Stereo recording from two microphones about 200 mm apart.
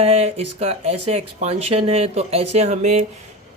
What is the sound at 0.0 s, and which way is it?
Speech, 30° right (ahead or behind).